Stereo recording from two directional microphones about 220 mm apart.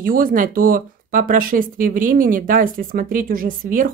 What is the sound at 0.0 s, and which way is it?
Speech, 40° right (ahead or behind).